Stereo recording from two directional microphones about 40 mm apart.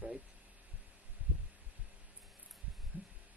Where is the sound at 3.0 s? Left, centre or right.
Right.